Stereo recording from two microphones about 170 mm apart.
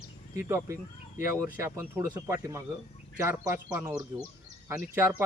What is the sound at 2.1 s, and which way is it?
Speech, 15° right (ahead or behind).